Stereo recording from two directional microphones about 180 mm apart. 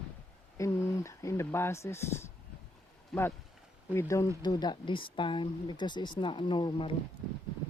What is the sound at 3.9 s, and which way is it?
Speech, 15° left (ahead or behind).